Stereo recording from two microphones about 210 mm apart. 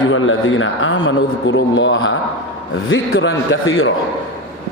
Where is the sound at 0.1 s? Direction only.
70° left (ahead or behind).